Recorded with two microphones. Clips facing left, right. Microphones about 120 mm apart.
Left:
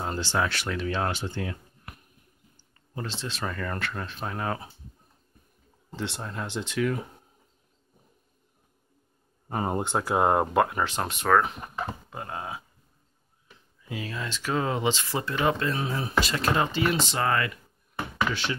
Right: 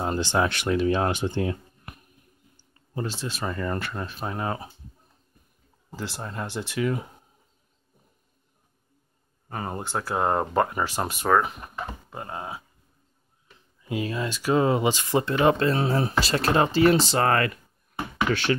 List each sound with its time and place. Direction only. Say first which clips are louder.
0.0 s speech: right 4 dB; 15° right (ahead or behind)
3.1 s speech: right 2 dB; 10° right (ahead or behind)
3.4 s speech: right 3 dB; 20° right (ahead or behind)
5.9 s speech: even; 5° right (ahead or behind)
9.5 s speech: left 3 dB; 20° left (ahead or behind); by 12.6 s 5° right (ahead or behind)
14.1 s speech: right 6 dB; 15° right (ahead or behind); by 17.2 s 35° right (ahead or behind)
17.2 s speech: right 4 dB; 55° right (ahead or behind)